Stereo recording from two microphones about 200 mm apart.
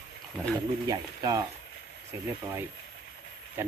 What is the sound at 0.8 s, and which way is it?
Speech, 20° right (ahead or behind).